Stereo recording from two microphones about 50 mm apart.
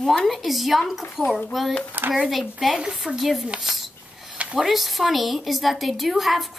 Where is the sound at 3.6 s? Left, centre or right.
Centre.